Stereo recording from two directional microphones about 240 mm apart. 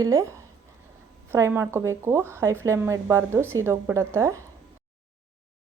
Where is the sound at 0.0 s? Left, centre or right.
Centre.